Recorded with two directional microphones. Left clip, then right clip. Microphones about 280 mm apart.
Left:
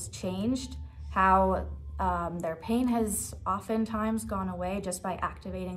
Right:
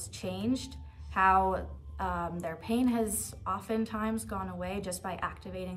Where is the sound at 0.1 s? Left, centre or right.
Centre.